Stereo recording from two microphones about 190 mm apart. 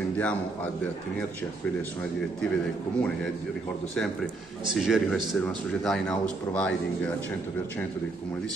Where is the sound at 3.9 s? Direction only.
Centre (ahead or behind).